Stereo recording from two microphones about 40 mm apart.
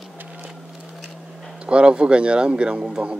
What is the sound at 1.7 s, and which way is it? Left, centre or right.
Speech, right.